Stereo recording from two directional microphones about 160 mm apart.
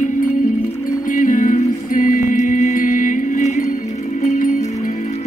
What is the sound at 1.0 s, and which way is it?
Music, 55° left (ahead or behind).